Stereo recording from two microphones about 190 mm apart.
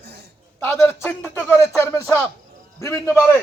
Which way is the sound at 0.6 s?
10° left (ahead or behind).